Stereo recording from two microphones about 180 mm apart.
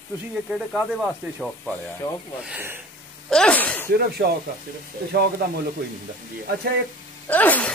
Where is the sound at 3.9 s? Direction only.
60° right (ahead or behind).